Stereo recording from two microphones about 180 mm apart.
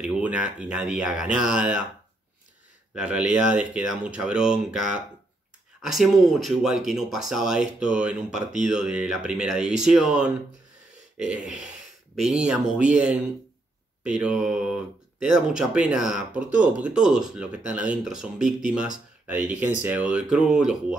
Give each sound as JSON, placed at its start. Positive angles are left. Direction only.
{"t": 0.0, "sound": "speech", "side_deg": -5}
{"t": 2.9, "sound": "speech", "side_deg": -5}
{"t": 11.4, "sound": "speech", "side_deg": -5}